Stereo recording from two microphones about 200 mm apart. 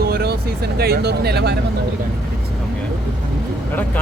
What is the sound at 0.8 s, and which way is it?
Speech, 50° right (ahead or behind).